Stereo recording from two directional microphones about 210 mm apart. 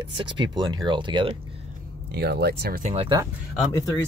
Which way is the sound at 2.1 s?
50° right (ahead or behind).